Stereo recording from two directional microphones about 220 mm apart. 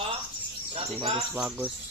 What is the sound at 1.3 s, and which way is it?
Speech, 5° right (ahead or behind).